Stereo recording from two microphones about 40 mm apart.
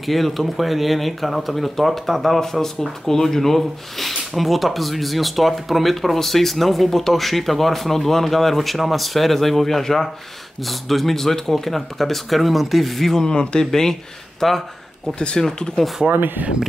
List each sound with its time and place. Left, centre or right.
0.0 s speech: centre
13.3 s speech: centre
14.4 s speech: centre
15.1 s speech: left
16.1 s speech: right